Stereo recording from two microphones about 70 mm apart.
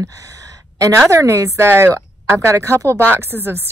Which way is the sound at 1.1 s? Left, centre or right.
Right.